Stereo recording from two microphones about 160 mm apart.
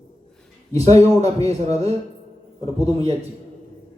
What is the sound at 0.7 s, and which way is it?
Speech, 40° right (ahead or behind).